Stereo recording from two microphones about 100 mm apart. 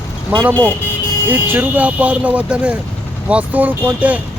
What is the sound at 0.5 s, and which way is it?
Speech, 20° left (ahead or behind).